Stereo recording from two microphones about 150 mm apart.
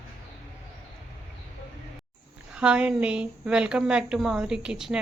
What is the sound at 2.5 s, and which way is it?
Speech, 5° right (ahead or behind).